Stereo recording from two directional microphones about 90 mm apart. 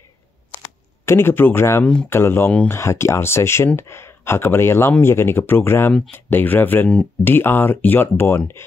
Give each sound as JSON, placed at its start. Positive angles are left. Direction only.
{"t": 1.0, "sound": "speech", "side_deg": 25}